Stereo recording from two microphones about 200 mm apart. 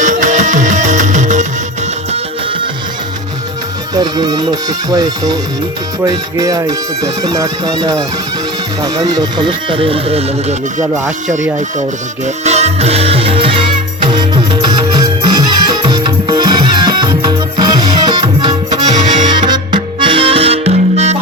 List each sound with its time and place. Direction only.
0.0 s music: 40° right (ahead or behind)
3.9 s speech: 20° right (ahead or behind)
12.2 s music: 35° right (ahead or behind)
14.6 s music: 20° right (ahead or behind)